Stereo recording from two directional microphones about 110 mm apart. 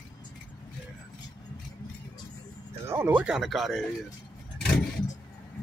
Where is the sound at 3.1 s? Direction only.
10° right (ahead or behind).